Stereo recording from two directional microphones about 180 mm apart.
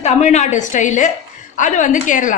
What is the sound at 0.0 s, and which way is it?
A woman's voice, 40° left (ahead or behind).